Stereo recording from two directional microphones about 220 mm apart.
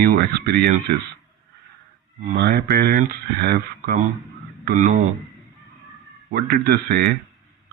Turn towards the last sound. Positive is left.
turn(degrees=-45)  # may be behind; listen again after turning